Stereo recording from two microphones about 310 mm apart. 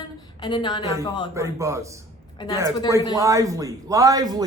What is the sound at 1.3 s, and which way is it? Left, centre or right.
Speech, centre.